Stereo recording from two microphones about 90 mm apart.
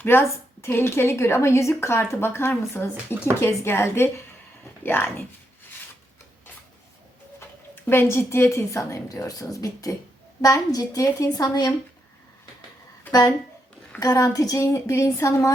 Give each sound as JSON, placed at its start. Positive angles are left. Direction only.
{"t": 0.0, "sound": "a woman's voice", "side_deg": 25}
{"t": 7.9, "sound": "a woman's voice", "side_deg": 25}
{"t": 13.1, "sound": "a woman's voice", "side_deg": 45}